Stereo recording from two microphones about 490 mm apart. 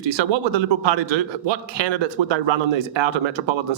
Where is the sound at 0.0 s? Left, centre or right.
Right.